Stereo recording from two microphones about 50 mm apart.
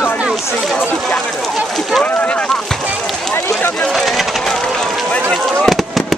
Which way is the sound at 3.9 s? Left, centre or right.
Centre.